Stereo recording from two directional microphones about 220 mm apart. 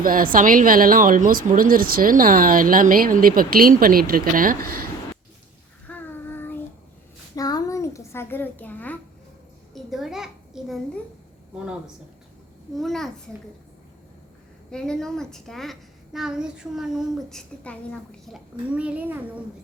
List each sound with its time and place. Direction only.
0.0 s a woman's voice: 40° right (ahead or behind)
5.9 s child singing: 10° left (ahead or behind)
7.3 s a sound: 15° left (ahead or behind)
9.7 s a child's voice: centre (ahead or behind)
12.7 s a woman's voice: centre (ahead or behind)
14.7 s a woman's voice: 5° left (ahead or behind)